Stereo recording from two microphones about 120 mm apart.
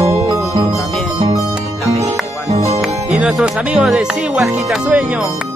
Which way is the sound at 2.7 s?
5° right (ahead or behind).